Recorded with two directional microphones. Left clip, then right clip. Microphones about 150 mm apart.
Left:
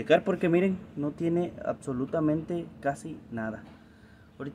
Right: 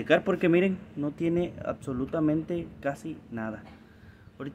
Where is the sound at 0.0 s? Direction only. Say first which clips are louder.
Even; centre (ahead or behind).